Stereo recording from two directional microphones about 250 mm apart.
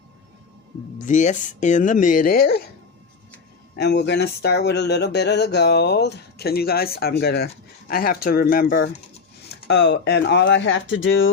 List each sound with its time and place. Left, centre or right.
0.9 s speech: left
3.8 s speech: left